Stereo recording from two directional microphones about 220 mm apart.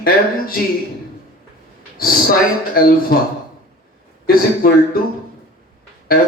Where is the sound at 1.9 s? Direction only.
40° left (ahead or behind).